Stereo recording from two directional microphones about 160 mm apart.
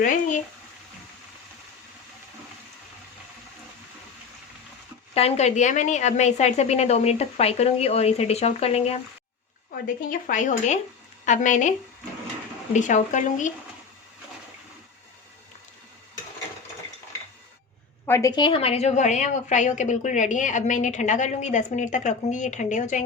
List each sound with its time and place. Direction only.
0.0 s speech: 50° left (ahead or behind)
5.1 s a woman's voice: 40° left (ahead or behind)
9.7 s a woman's voice: 60° left (ahead or behind)
12.7 s a woman's voice: 50° left (ahead or behind)
18.0 s a woman's voice: 20° left (ahead or behind); by 23.0 s 50° left (ahead or behind)